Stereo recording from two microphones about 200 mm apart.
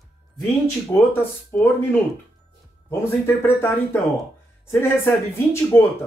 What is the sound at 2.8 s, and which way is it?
Speech, 10° left (ahead or behind).